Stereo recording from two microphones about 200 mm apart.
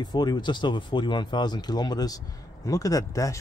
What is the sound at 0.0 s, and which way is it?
Speech, 20° left (ahead or behind).